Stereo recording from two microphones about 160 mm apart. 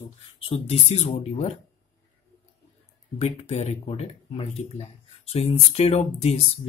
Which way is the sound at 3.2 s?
45° left (ahead or behind).